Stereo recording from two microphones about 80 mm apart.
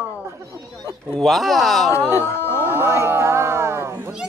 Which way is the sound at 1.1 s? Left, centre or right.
Centre.